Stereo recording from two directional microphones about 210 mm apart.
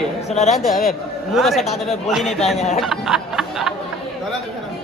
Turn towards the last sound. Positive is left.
turn(degrees=0)  # may be behind; listen again after turning